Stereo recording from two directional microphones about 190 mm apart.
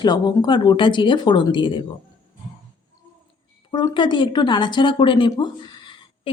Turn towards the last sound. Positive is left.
turn(degrees=25)  # may be behind; listen again after turning